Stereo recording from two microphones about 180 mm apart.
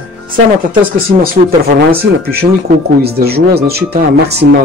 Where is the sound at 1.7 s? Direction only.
55° right (ahead or behind).